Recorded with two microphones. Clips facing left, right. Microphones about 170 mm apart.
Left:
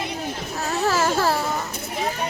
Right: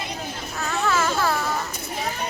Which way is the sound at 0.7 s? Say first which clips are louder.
Left 2 dB; 35° left (ahead or behind).